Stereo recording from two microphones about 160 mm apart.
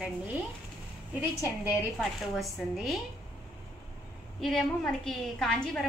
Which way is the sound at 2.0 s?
Centre (ahead or behind).